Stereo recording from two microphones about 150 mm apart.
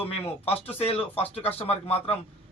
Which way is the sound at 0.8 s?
40° left (ahead or behind).